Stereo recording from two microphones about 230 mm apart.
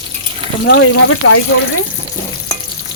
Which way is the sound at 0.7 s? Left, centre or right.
Left.